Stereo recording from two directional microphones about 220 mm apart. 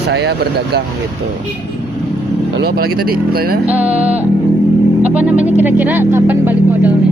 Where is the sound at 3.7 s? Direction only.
5° right (ahead or behind).